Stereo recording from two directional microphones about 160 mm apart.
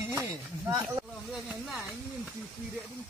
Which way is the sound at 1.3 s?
Centre (ahead or behind).